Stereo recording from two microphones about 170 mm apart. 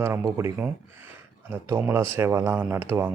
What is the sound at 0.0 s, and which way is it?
Speech, 15° right (ahead or behind).